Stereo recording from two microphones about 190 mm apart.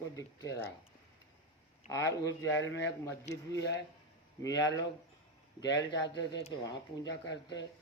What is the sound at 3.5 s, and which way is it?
Speech, 65° left (ahead or behind).